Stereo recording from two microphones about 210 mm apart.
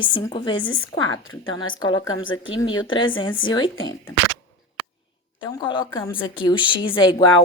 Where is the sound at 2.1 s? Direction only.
70° left (ahead or behind).